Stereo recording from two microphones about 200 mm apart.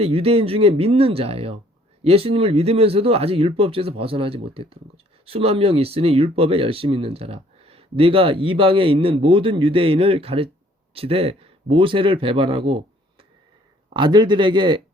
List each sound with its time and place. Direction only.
0.0 s speech: 30° right (ahead or behind)